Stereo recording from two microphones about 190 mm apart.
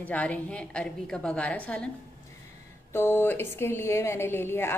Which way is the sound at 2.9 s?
10° left (ahead or behind).